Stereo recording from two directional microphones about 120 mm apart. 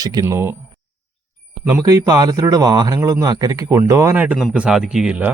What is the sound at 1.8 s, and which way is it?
Speech, 30° right (ahead or behind).